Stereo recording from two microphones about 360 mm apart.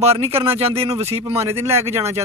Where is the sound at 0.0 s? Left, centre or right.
Centre.